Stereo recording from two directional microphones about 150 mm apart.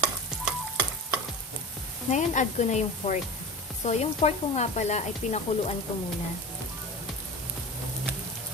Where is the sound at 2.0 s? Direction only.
55° left (ahead or behind).